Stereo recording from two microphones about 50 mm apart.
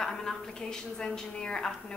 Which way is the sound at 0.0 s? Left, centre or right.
Centre.